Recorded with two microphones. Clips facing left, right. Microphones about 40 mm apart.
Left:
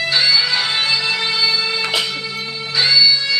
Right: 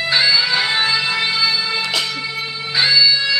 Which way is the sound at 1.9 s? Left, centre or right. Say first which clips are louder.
Left 1 dB; centre.